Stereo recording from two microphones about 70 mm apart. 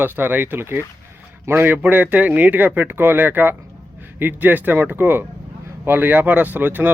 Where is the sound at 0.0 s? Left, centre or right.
Right.